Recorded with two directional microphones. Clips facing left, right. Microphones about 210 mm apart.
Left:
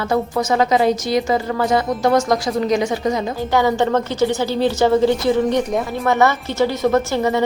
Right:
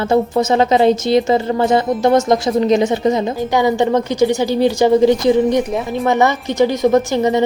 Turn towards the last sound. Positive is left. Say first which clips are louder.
# right 3 dB
turn(degrees=-20)  # may be behind; listen again after turning